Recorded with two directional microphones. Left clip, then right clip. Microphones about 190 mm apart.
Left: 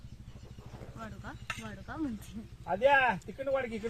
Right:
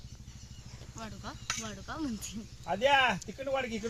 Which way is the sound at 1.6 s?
50° right (ahead or behind).